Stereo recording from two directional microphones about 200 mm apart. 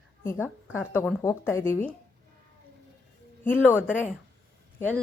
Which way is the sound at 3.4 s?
10° left (ahead or behind).